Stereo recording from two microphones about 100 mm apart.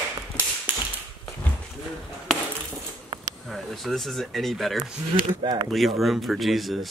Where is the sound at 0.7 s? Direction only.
15° right (ahead or behind).